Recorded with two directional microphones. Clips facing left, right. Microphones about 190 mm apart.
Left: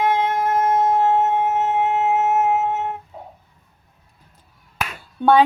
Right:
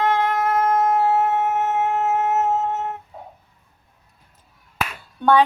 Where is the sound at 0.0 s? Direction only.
15° left (ahead or behind).